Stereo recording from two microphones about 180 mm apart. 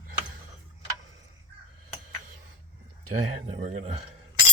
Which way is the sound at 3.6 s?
40° right (ahead or behind).